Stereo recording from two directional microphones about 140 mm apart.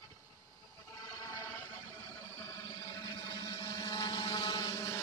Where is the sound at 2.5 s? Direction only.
25° left (ahead or behind).